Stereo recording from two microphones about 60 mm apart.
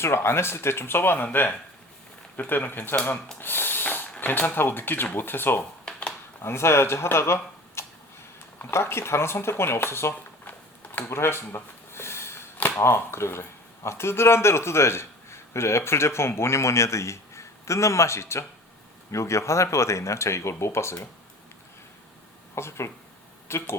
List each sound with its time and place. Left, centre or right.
0.0 s a man's voice: left
3.4 s snort: left
4.2 s speech: left
5.8 s a sound: centre
6.4 s a man's voice: left
7.8 s tick-tock: left
8.7 s a man's voice: left
11.1 s a sound: left
12.8 s a man's voice: left
22.5 s a man's voice: left